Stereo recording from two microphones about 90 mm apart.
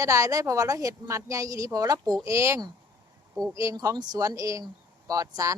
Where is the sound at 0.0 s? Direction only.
40° right (ahead or behind).